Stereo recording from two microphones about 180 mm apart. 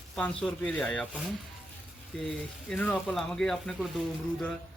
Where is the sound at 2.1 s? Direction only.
5° left (ahead or behind).